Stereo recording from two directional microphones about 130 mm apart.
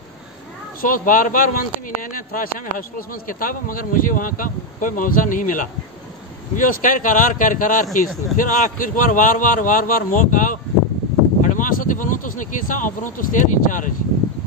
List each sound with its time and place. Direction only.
0.7 s speech: 90° left
7.8 s speech: centre (ahead or behind)
8.4 s speech: 85° left